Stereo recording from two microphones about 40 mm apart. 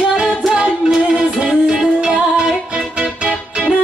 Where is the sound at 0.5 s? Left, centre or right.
Right.